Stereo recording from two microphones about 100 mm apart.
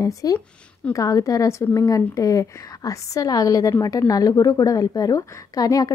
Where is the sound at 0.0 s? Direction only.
35° left (ahead or behind).